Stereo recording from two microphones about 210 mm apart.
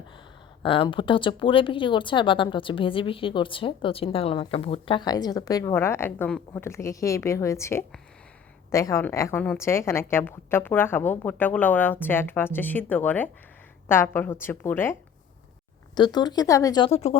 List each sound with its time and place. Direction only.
0.6 s a woman's voice: 25° left (ahead or behind)
16.0 s a woman's voice: 20° left (ahead or behind)